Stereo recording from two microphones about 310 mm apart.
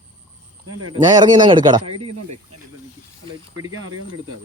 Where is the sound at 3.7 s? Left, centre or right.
Right.